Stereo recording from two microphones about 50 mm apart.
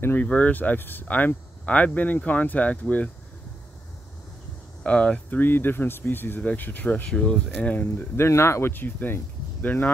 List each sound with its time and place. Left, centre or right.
0.2 s speech: left
1.0 s speech: left
4.8 s speech: left
5.3 s speech: left
7.1 s speech: centre
7.6 s speech: left
8.2 s speech: left
8.7 s speech: left